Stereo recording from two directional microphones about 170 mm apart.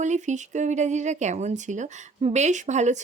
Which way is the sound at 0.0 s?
45° right (ahead or behind).